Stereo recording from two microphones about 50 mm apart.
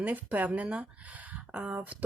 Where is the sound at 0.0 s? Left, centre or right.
Right.